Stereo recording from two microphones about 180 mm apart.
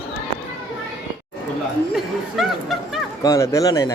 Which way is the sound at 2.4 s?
Centre (ahead or behind).